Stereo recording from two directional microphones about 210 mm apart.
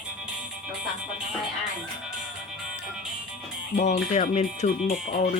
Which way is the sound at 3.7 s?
35° left (ahead or behind).